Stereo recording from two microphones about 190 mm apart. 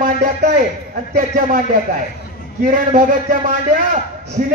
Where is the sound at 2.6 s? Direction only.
45° right (ahead or behind).